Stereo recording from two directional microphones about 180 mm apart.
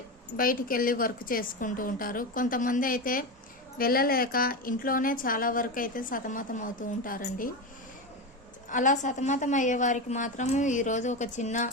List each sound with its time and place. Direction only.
0.3 s a woman's voice: 50° left (ahead or behind)
8.7 s a woman's voice: 45° left (ahead or behind)